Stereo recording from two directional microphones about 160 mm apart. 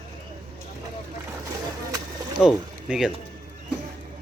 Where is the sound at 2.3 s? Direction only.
5° right (ahead or behind).